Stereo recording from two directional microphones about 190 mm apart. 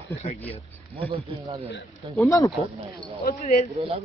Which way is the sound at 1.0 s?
30° right (ahead or behind).